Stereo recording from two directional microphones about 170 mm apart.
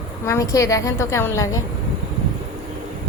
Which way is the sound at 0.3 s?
20° left (ahead or behind).